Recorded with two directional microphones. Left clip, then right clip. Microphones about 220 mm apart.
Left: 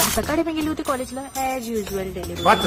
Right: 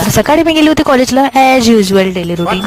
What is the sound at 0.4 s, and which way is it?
Speech, 50° right (ahead or behind).